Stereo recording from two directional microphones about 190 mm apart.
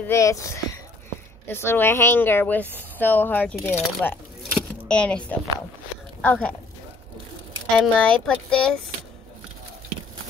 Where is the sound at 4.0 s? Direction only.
5° left (ahead or behind).